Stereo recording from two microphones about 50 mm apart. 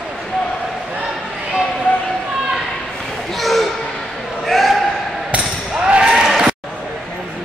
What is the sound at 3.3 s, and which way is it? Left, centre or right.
Basketball bounce, centre.